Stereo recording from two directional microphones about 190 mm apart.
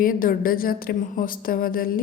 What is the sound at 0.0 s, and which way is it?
A woman's voice, 45° left (ahead or behind).